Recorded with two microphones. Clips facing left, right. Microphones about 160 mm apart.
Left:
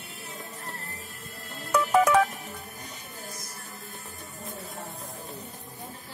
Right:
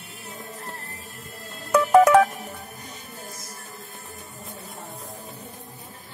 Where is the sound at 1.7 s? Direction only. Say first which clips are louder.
Right 6 dB; 55° right (ahead or behind).